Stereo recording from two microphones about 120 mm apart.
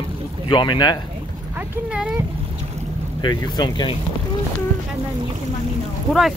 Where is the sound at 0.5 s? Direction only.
40° left (ahead or behind).